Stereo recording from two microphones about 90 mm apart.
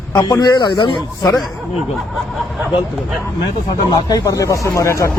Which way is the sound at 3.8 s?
45° left (ahead or behind).